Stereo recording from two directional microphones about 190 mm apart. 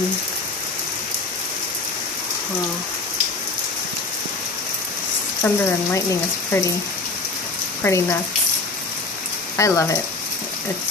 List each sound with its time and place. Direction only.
5.4 s speech: 15° left (ahead or behind)
7.8 s speech: 15° left (ahead or behind)
9.6 s speech: 15° left (ahead or behind)